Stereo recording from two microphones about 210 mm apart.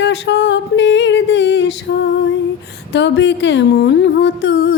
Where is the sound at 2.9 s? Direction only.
55° left (ahead or behind).